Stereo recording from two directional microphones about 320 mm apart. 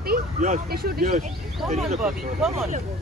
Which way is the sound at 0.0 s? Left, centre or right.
Right.